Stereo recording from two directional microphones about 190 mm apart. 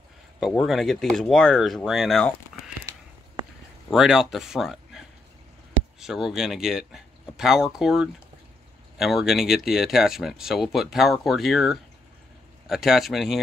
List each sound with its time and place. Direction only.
0.4 s speech: centre (ahead or behind)
3.9 s speech: centre (ahead or behind)